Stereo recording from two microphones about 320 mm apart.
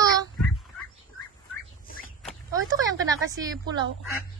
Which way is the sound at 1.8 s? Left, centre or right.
Left.